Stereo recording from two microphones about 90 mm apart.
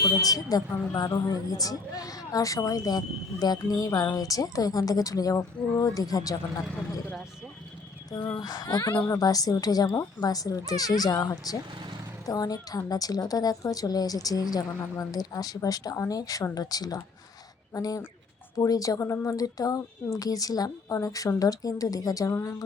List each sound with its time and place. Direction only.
0.0 s a woman's voice: 45° left (ahead or behind)
8.4 s a woman's voice: 45° left (ahead or behind)